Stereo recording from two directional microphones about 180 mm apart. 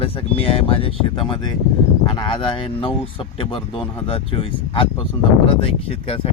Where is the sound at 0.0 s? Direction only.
30° left (ahead or behind).